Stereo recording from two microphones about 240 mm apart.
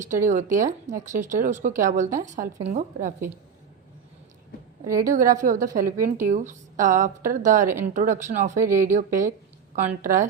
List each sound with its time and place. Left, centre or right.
0.0 s speech: centre
0.3 s a woman's voice: right
4.9 s speech: centre
5.1 s a woman's voice: right
8.5 s speech: centre
9.8 s a woman's voice: right